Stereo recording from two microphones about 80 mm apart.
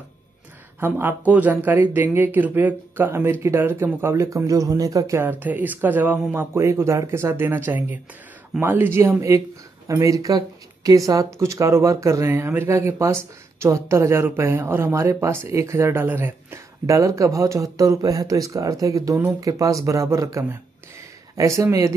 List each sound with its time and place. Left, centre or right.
0.7 s speech: right
5.2 s speech: right
6.6 s speech: right